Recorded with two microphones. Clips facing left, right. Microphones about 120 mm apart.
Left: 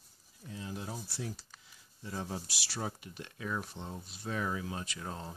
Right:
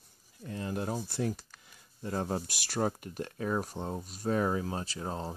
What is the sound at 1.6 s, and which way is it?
Speech, 55° right (ahead or behind).